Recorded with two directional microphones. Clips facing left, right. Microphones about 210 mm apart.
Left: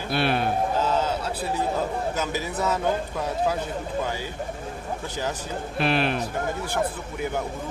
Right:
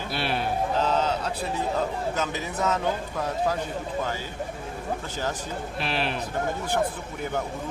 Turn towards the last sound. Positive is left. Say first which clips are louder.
# left 5 dB
turn(degrees=55)  # may be behind; listen again after turning